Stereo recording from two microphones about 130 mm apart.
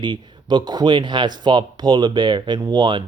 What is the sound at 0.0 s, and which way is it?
Speech, 35° right (ahead or behind).